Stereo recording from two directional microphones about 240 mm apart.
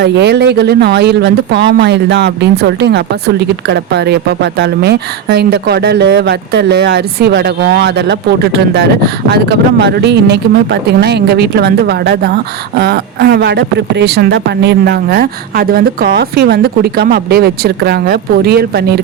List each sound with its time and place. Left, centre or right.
0.0 s speech: right